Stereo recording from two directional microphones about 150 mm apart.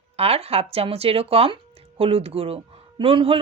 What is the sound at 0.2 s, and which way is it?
Speech, 40° right (ahead or behind).